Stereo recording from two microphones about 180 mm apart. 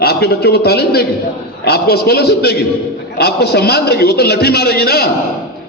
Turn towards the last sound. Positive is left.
turn(degrees=60)  # may be behind; listen again after turning